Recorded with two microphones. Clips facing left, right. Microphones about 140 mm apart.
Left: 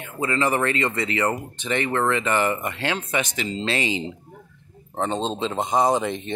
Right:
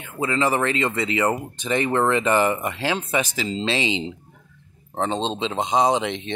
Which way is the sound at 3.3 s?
30° right (ahead or behind).